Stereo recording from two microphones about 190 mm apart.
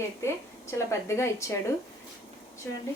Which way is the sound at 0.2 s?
15° left (ahead or behind).